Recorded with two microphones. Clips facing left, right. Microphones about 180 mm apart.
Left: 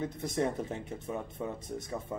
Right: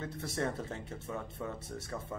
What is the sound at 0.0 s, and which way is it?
Speech, 15° left (ahead or behind).